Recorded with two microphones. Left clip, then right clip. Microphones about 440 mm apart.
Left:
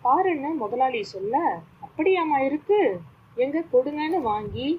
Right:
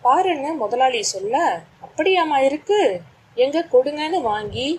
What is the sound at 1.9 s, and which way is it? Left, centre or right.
A woman's voice, centre.